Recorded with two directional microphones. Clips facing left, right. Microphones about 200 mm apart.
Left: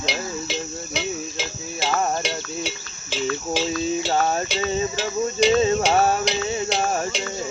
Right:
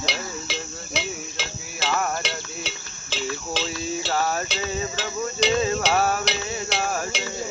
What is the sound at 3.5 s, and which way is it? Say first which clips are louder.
Cricket: left 6 dB; 15° left (ahead or behind).